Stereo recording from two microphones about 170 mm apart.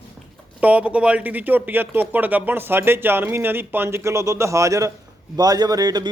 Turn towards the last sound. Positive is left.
turn(degrees=-25)  # may be behind; listen again after turning